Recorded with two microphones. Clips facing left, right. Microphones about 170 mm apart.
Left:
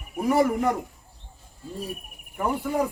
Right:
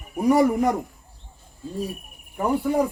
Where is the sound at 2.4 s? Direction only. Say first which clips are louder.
Right 4 dB; 15° right (ahead or behind).